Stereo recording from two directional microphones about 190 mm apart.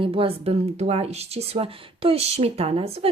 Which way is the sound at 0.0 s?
30° right (ahead or behind).